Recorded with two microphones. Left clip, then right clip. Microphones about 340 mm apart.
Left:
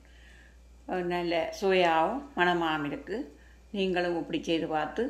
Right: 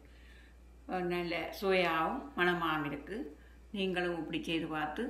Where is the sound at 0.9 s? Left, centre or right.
Centre.